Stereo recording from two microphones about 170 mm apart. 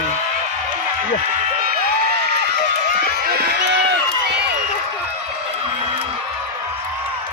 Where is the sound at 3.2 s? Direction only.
65° right (ahead or behind).